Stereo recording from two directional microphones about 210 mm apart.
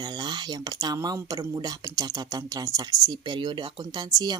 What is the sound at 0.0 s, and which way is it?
Speech, 20° right (ahead or behind).